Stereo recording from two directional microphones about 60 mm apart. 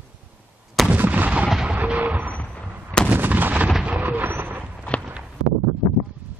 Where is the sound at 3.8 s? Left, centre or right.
Right.